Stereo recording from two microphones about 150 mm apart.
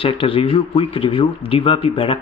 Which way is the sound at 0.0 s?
35° left (ahead or behind).